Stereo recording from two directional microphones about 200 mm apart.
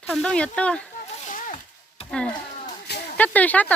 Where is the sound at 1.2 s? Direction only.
40° left (ahead or behind).